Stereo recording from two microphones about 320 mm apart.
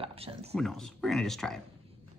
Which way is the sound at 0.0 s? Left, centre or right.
Centre.